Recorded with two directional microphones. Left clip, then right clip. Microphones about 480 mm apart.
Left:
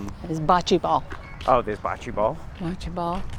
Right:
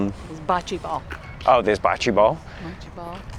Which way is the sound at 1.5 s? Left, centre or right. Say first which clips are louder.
Right 5 dB; right.